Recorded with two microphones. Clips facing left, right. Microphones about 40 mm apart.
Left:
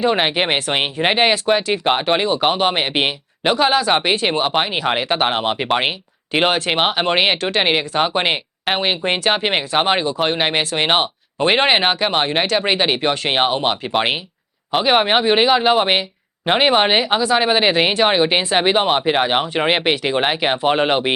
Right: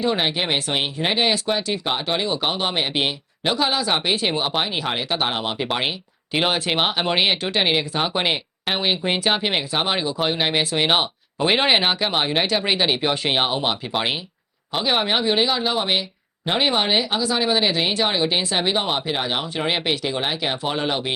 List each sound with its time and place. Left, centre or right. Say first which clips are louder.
0.0 s speech: left 5 dB; left
1.8 s speech: left 9 dB; left
2.2 s speech: left 6 dB; centre
2.5 s speech: left 5 dB; left
3.4 s speech: left 6 dB; centre
6.3 s speech: left 4 dB; centre; by 21.1 s left